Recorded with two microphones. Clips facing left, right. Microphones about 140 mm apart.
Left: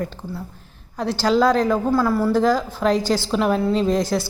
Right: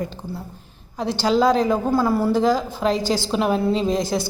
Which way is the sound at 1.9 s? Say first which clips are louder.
Even; 25° right (ahead or behind).